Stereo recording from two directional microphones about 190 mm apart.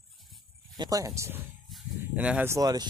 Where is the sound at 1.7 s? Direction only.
5° right (ahead or behind).